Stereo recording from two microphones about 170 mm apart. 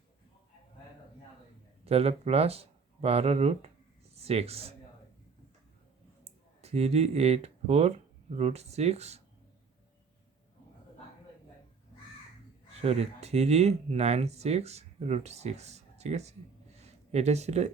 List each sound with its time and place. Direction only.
1.8 s speech: 35° right (ahead or behind)
6.2 s speech: 40° right (ahead or behind)
12.8 s speech: 40° right (ahead or behind)
16.7 s a sound: 40° right (ahead or behind)